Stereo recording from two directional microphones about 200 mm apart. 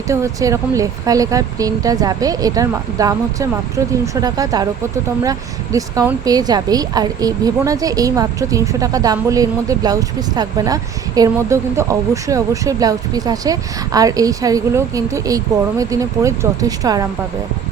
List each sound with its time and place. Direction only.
0.1 s speech: 15° right (ahead or behind)